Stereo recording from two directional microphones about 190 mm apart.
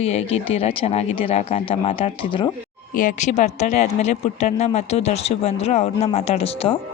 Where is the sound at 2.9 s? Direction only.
45° left (ahead or behind).